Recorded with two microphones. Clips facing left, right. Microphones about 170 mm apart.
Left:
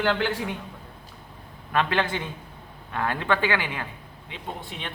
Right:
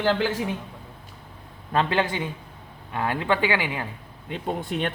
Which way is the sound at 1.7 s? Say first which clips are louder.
Right 1 dB; 20° right (ahead or behind).